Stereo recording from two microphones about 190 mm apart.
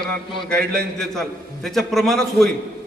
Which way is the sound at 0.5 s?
55° right (ahead or behind).